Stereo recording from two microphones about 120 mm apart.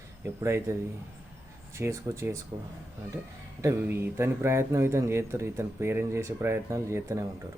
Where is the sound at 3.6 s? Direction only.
20° right (ahead or behind).